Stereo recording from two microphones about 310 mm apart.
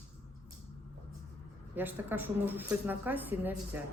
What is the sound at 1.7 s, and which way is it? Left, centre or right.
A woman's voice, centre.